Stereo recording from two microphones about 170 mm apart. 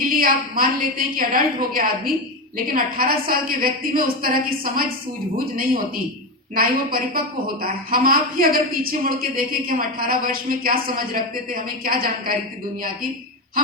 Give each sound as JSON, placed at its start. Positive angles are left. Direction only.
{"t": 0.0, "sound": "a woman's voice", "side_deg": -60}
{"t": 6.5, "sound": "a woman's voice", "side_deg": -60}